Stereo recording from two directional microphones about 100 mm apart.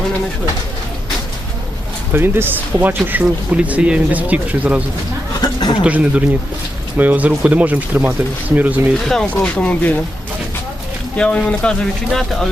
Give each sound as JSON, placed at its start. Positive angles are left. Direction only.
{"t": 2.1, "sound": "speech", "side_deg": -20}
{"t": 5.4, "sound": "a sound", "side_deg": 45}
{"t": 5.8, "sound": "speech", "side_deg": -10}
{"t": 9.0, "sound": "speech", "side_deg": 10}
{"t": 11.2, "sound": "speech", "side_deg": 10}